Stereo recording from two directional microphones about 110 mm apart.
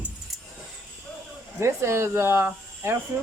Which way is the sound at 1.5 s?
25° right (ahead or behind).